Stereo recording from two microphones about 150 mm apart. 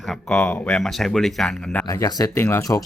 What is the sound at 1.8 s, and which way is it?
Speech, 20° left (ahead or behind).